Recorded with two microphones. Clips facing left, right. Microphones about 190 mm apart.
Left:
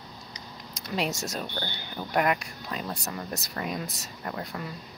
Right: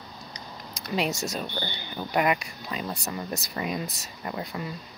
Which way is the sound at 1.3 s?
Centre (ahead or behind).